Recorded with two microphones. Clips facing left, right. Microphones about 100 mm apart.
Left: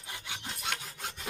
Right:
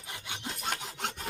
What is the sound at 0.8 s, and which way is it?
Rub, 75° right (ahead or behind).